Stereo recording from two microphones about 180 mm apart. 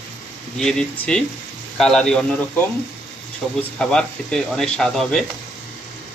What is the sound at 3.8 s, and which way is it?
Speech, 5° left (ahead or behind).